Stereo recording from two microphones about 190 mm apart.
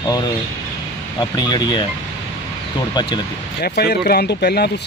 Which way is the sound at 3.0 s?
25° left (ahead or behind).